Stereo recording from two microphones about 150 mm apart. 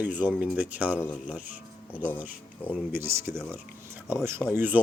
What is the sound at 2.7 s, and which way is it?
Speech, 15° right (ahead or behind).